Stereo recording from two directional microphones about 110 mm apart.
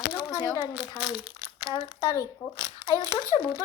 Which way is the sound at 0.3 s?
35° left (ahead or behind).